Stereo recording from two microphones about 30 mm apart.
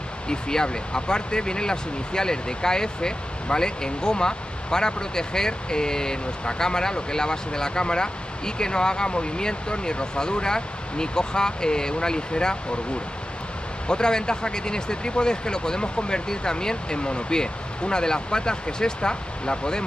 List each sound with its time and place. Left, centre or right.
0.3 s speech: left
13.8 s speech: left